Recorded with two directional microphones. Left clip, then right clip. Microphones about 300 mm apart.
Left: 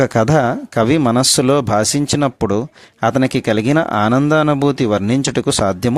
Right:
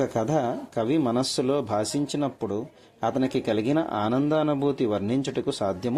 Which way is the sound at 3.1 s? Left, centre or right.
Left.